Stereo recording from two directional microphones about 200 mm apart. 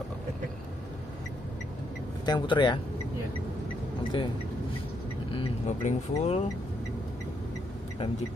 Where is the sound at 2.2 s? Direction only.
20° left (ahead or behind).